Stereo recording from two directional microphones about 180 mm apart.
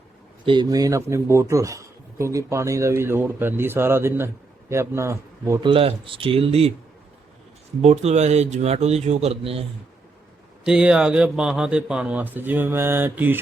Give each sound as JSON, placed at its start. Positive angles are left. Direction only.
{"t": 0.4, "sound": "a man's voice", "side_deg": -25}
{"t": 5.6, "sound": "a man's voice", "side_deg": -30}
{"t": 7.8, "sound": "a man's voice", "side_deg": -35}
{"t": 10.7, "sound": "a man's voice", "side_deg": -5}